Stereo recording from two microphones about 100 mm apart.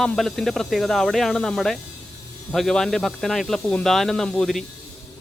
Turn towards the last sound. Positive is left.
turn(degrees=5)  # may be behind; listen again after turning